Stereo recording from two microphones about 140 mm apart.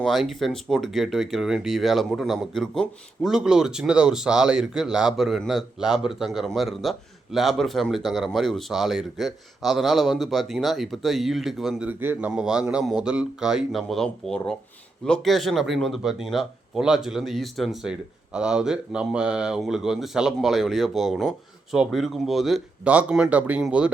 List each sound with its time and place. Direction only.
0.0 s speech: centre (ahead or behind)
11.9 s speech: 15° right (ahead or behind)